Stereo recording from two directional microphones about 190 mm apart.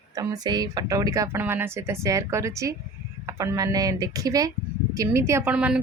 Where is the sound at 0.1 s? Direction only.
20° right (ahead or behind).